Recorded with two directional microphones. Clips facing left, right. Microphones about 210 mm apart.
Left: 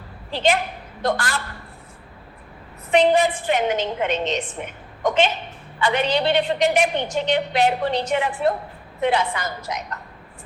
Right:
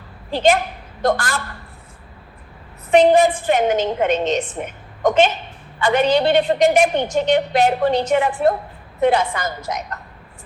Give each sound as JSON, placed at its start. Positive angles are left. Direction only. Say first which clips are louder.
{"t": 0.3, "sound": "a woman's voice", "louder": "right 4 dB", "side_deg": -45}
{"t": 2.9, "sound": "a woman's voice", "louder": "right 4 dB", "side_deg": -45}